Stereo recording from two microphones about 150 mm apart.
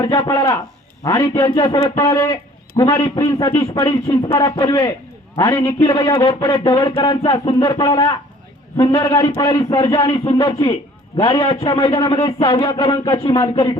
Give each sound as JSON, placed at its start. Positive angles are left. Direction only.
{"t": 0.0, "sound": "a man's voice", "side_deg": 30}